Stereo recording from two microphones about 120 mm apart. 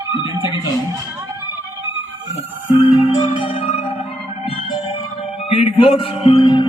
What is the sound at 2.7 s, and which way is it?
Music, 50° left (ahead or behind).